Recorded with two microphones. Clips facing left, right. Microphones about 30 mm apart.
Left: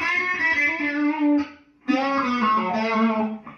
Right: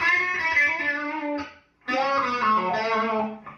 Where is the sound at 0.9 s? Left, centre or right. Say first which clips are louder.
Left 8 dB; centre.